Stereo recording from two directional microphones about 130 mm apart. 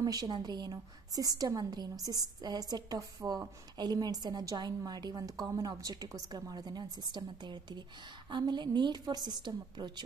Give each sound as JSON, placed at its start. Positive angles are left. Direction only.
{"t": 0.0, "sound": "a woman's voice", "side_deg": -30}